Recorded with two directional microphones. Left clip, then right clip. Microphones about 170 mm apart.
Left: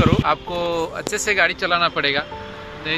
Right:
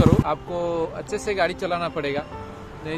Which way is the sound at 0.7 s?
Centre (ahead or behind).